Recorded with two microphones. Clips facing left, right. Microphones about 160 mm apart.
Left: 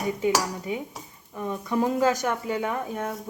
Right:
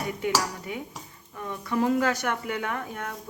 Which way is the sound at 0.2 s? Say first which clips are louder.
Left 3 dB; 20° left (ahead or behind).